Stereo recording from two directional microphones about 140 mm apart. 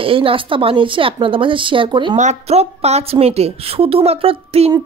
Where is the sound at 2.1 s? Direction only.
55° right (ahead or behind).